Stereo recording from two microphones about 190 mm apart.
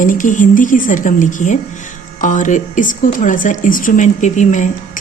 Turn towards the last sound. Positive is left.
turn(degrees=40)  # may be behind; listen again after turning